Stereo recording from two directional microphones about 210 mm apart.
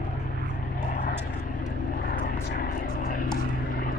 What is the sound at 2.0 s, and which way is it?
Vehicle, 45° left (ahead or behind).